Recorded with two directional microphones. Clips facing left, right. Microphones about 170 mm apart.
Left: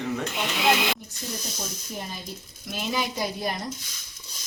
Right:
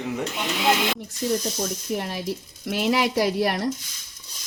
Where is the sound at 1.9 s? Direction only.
75° right (ahead or behind).